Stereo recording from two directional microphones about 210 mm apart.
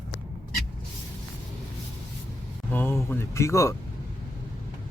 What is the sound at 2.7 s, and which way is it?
Speech, 10° left (ahead or behind).